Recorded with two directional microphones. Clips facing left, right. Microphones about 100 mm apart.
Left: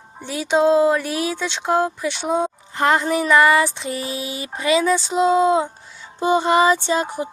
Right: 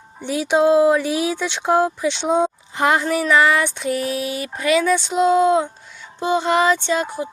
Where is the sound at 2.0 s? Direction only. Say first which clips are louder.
Right 3 dB; 5° left (ahead or behind).